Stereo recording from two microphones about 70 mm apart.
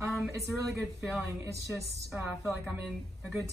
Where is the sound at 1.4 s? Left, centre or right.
Right.